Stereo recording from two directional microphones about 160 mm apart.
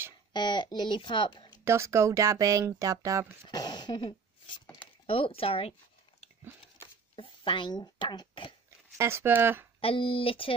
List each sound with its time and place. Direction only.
0.3 s speech: 30° left (ahead or behind)
1.6 s speech: 15° right (ahead or behind)
3.4 s speech: 25° left (ahead or behind)
7.2 s speech: 30° left (ahead or behind)
8.6 s speech: 15° right (ahead or behind)
9.8 s speech: 35° left (ahead or behind)